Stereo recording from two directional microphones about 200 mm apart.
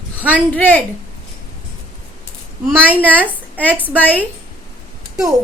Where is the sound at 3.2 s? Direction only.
10° left (ahead or behind).